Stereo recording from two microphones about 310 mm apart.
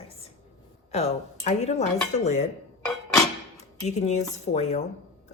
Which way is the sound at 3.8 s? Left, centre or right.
Left.